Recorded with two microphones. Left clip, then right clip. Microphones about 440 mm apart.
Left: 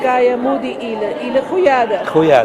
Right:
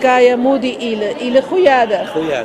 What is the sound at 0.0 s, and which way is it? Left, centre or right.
A woman's voice, right.